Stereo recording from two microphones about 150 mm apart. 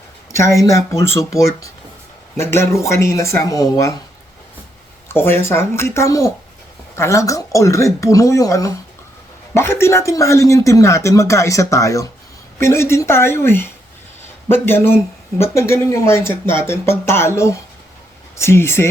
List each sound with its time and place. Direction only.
0.3 s speech: 20° left (ahead or behind)
2.3 s speech: 15° left (ahead or behind)
5.0 s speech: 15° left (ahead or behind)